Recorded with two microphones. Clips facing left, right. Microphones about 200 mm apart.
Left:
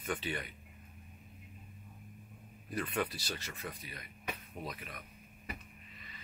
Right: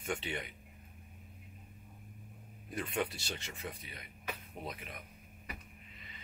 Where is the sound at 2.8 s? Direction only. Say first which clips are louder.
Even; 25° right (ahead or behind).